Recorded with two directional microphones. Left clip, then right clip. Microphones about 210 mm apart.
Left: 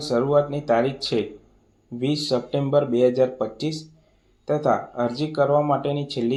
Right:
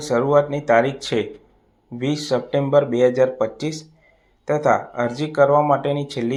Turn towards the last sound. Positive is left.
turn(degrees=-10)  # may be behind; listen again after turning